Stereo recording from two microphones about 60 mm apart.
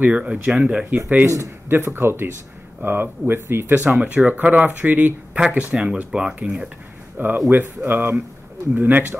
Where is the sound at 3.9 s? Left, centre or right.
Right.